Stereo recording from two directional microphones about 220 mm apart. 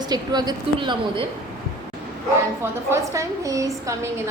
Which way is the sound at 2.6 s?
10° right (ahead or behind).